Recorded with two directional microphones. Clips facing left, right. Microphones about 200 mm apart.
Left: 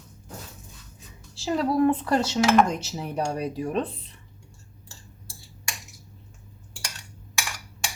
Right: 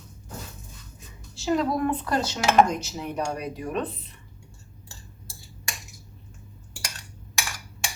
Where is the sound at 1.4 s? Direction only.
30° left (ahead or behind).